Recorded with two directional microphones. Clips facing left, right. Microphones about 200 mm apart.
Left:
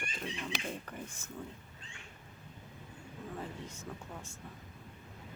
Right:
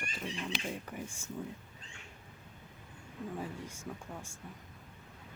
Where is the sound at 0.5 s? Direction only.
45° left (ahead or behind).